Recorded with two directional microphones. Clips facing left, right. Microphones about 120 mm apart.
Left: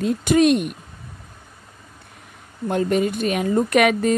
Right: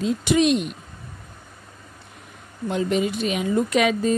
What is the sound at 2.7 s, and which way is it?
A woman's voice, 50° left (ahead or behind).